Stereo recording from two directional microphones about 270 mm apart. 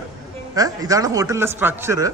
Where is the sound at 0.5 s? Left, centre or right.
Centre.